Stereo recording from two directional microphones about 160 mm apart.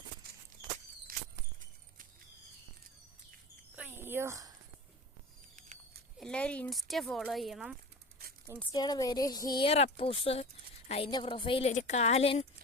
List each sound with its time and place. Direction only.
1.1 s a sound: 65° right (ahead or behind)
3.8 s a sound: 15° right (ahead or behind)
6.1 s speech: 5° left (ahead or behind)
8.7 s a woman's voice: 25° left (ahead or behind); by 11.1 s 40° left (ahead or behind)
11.1 s a woman's voice: 30° left (ahead or behind)
11.7 s a woman's voice: 45° left (ahead or behind)